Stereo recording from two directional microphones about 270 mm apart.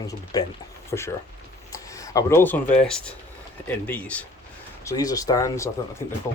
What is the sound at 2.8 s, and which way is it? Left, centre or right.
Speech, centre.